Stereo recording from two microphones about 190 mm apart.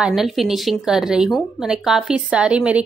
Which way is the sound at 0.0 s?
Centre (ahead or behind).